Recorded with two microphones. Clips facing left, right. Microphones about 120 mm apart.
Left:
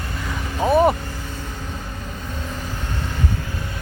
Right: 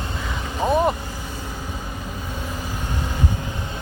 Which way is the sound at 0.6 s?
5° left (ahead or behind).